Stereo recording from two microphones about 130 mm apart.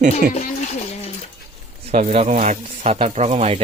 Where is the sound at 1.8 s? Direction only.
55° right (ahead or behind).